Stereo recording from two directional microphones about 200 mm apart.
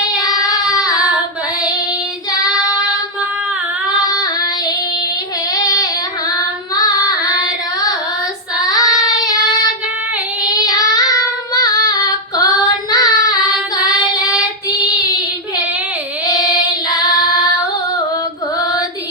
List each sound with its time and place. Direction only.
0.2 s child singing: 20° left (ahead or behind)
2.4 s child singing: 20° left (ahead or behind)
4.0 s child singing: 20° left (ahead or behind)
10.7 s female singing: 20° left (ahead or behind)
14.7 s child singing: 20° left (ahead or behind)
16.2 s child singing: 20° left (ahead or behind)